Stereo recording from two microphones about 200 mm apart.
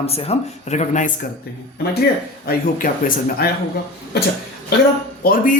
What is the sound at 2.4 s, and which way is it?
Speech, 45° left (ahead or behind).